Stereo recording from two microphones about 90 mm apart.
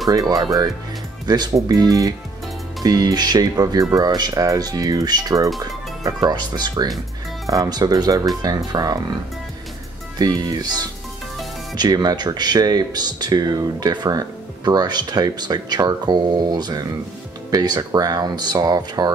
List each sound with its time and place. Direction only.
0.1 s speech: 40° right (ahead or behind)
10.1 s speech: 45° right (ahead or behind)